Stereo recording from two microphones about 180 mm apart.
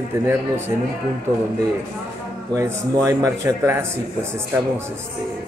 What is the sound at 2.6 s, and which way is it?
Speech, 20° right (ahead or behind).